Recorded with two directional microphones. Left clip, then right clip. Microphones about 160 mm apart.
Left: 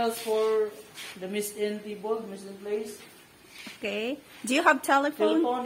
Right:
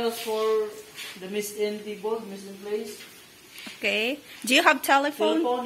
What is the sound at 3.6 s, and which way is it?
A woman's voice, 5° left (ahead or behind).